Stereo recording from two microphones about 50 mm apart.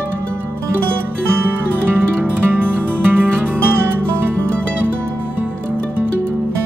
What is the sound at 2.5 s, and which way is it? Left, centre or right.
Music, right.